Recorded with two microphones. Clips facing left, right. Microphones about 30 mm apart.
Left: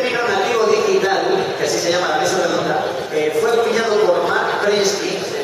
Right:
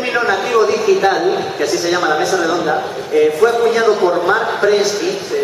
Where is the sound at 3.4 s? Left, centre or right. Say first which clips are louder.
Right 3 dB; right.